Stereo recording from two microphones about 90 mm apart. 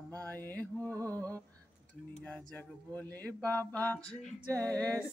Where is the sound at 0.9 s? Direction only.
40° right (ahead or behind).